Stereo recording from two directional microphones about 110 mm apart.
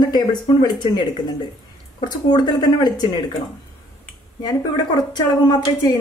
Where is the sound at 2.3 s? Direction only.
40° left (ahead or behind).